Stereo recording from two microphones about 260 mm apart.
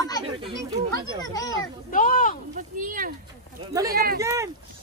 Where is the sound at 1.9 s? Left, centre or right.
Left.